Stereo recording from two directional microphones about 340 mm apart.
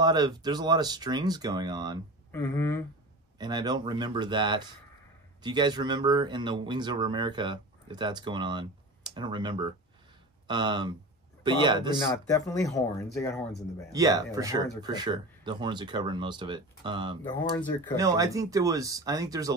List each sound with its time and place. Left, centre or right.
0.0 s speech: centre
2.3 s speech: centre
3.3 s speech: centre
12.1 s speech: centre
13.9 s speech: centre
17.3 s speech: centre
17.9 s speech: centre